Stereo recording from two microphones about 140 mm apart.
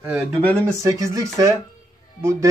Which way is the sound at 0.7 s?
20° right (ahead or behind).